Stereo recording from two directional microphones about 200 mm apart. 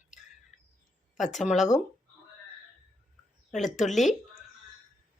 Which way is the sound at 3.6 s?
40° left (ahead or behind).